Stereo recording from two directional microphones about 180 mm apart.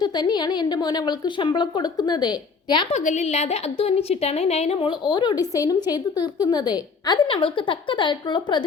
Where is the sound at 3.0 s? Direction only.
40° left (ahead or behind).